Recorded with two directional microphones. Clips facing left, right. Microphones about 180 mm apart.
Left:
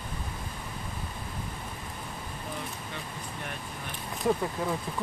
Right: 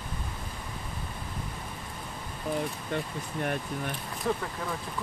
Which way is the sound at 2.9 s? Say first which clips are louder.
Right 7 dB; 50° right (ahead or behind).